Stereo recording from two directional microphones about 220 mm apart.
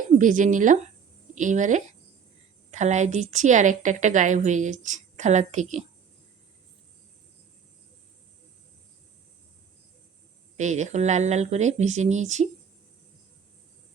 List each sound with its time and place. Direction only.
0.2 s a woman's voice: 35° right (ahead or behind)
10.6 s a woman's voice: 35° right (ahead or behind)